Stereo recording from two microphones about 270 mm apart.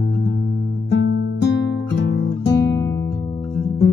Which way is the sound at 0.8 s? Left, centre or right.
Left.